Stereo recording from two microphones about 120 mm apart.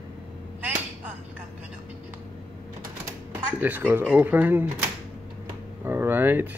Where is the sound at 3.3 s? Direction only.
15° right (ahead or behind).